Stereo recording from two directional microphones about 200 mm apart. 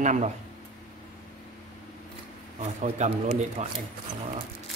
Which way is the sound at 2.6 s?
35° right (ahead or behind).